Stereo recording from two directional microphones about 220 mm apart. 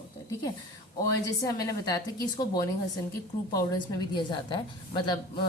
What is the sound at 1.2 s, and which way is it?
A woman's voice, 15° left (ahead or behind).